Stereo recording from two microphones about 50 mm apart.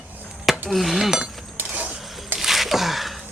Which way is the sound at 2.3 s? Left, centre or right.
Centre.